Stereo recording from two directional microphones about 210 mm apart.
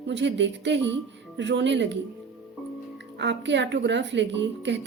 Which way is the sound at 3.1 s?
60° right (ahead or behind).